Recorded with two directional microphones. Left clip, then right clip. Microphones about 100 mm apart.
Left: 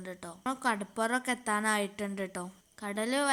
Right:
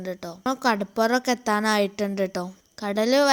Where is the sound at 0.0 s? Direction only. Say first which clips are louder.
Right 9 dB; 35° right (ahead or behind).